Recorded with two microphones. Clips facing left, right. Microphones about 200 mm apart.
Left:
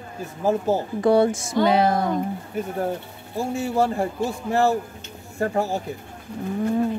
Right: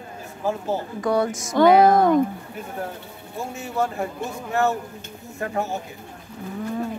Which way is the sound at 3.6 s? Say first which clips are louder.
Left 3 dB; 30° left (ahead or behind).